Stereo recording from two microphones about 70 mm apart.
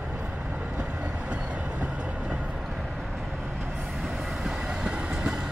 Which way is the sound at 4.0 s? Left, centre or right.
Centre.